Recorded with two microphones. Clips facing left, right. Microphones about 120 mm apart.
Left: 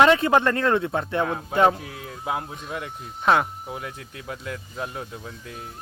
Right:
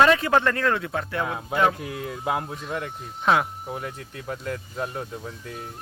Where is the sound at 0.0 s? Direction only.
20° left (ahead or behind).